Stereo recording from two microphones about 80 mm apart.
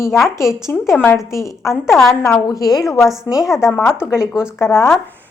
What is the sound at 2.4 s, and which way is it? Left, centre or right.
Speech, left.